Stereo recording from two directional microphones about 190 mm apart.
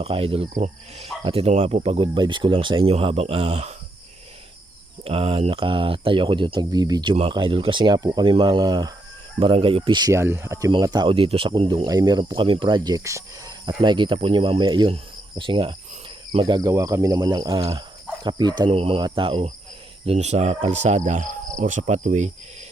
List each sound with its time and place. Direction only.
0.0 s speech: 30° right (ahead or behind)
5.0 s speech: 30° right (ahead or behind)